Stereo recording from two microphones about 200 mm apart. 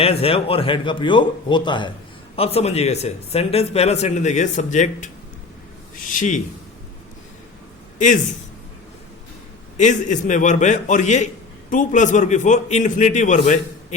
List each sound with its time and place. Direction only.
0.0 s a man's voice: 30° left (ahead or behind)
7.9 s a man's voice: 40° left (ahead or behind)
9.7 s speech: 35° left (ahead or behind)